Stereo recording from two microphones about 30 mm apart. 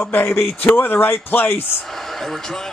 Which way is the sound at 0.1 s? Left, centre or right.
Left.